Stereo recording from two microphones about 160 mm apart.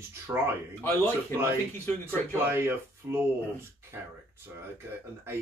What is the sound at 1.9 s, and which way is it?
Speech, 5° left (ahead or behind).